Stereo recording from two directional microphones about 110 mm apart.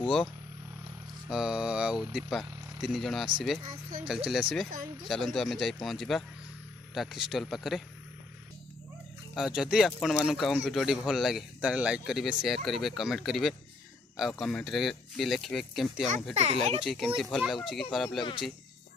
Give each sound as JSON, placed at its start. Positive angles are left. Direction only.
{"t": 1.3, "sound": "speech", "side_deg": -5}
{"t": 9.3, "sound": "speech", "side_deg": -5}
{"t": 16.3, "sound": "a child's voice", "side_deg": -90}
{"t": 16.8, "sound": "speech", "side_deg": 0}
{"t": 18.2, "sound": "speech", "side_deg": 45}